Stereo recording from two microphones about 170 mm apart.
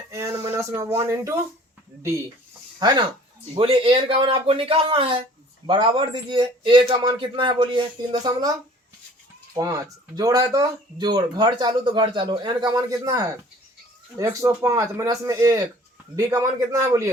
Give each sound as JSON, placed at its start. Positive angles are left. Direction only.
{"t": 0.1, "sound": "speech", "side_deg": -15}
{"t": 2.7, "sound": "speech", "side_deg": -25}
{"t": 9.6, "sound": "speech", "side_deg": -20}